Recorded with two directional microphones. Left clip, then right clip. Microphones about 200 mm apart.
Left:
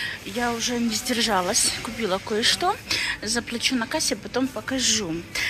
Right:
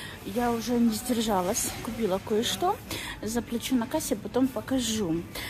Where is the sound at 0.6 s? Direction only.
25° right (ahead or behind).